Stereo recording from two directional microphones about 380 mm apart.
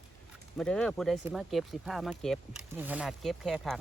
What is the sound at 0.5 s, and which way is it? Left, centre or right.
Speech, centre.